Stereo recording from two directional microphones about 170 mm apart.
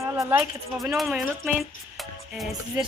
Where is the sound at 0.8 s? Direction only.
Centre (ahead or behind).